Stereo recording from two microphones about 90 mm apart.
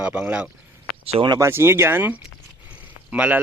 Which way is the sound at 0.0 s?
20° right (ahead or behind).